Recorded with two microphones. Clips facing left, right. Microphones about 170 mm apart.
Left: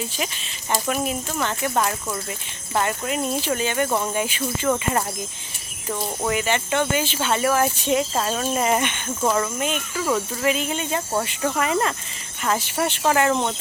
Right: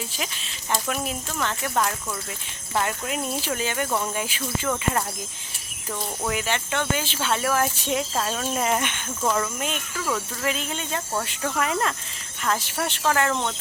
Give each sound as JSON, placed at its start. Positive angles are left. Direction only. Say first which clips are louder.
{"t": 0.7, "sound": "speech", "louder": "left 4 dB", "side_deg": 5}
{"t": 5.9, "sound": "speech", "louder": "left 4 dB", "side_deg": 0}